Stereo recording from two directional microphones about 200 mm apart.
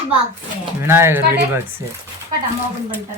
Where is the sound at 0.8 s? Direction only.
10° right (ahead or behind).